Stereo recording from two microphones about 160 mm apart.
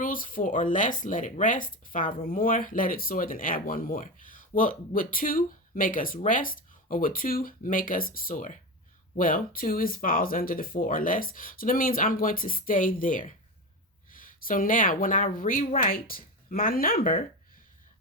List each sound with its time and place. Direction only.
0.0 s speech: 60° left (ahead or behind)